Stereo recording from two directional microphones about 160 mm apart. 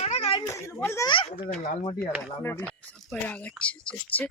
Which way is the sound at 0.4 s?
20° left (ahead or behind).